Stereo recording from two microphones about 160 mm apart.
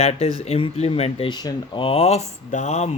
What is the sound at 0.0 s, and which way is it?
Speech, 40° left (ahead or behind).